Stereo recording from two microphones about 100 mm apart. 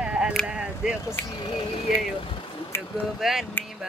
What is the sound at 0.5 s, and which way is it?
Speech, 10° right (ahead or behind).